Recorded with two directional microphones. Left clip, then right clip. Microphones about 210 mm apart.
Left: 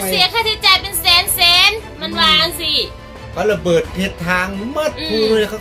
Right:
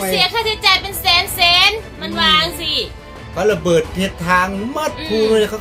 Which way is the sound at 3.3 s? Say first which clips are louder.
Even; 15° right (ahead or behind).